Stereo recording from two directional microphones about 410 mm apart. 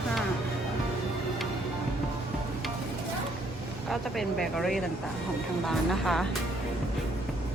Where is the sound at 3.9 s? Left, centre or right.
Centre.